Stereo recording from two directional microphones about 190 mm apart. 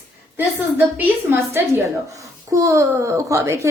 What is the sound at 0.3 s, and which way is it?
A child's voice, 10° right (ahead or behind).